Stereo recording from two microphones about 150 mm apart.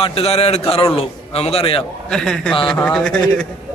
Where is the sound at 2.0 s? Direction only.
5° left (ahead or behind).